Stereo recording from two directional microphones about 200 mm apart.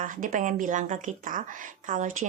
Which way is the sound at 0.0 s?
40° right (ahead or behind).